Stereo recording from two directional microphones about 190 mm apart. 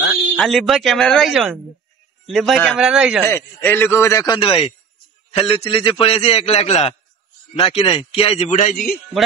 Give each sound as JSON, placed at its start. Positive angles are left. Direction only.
{"t": 0.4, "sound": "speech", "side_deg": 0}
{"t": 3.3, "sound": "a man's voice", "side_deg": 10}